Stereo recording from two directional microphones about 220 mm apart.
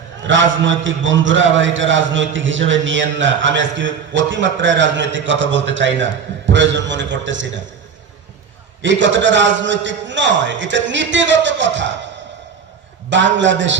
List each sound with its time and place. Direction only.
0.3 s a man's voice: 60° right (ahead or behind)
8.8 s a man's voice: 55° right (ahead or behind)
13.1 s a man's voice: 55° right (ahead or behind)